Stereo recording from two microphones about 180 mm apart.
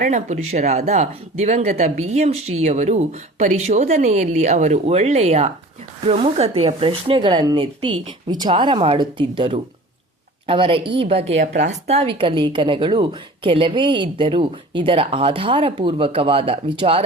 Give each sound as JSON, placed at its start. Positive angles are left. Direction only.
{"t": 0.0, "sound": "a woman's voice", "side_deg": -40}